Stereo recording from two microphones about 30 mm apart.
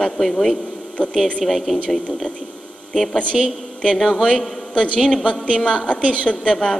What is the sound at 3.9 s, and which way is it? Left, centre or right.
Speech, centre.